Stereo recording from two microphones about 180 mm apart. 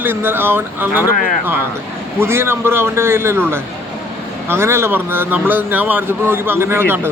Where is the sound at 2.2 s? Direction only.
15° right (ahead or behind).